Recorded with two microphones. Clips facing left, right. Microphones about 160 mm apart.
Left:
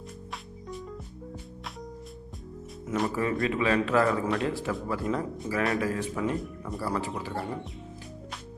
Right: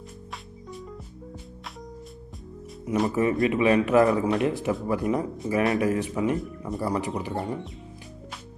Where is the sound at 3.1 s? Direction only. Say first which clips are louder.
Right 5 dB; 20° right (ahead or behind).